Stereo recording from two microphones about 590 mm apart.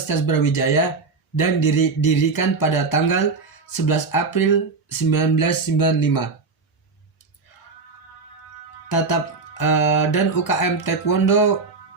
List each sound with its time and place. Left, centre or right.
0.1 s music: left
9.6 s music: left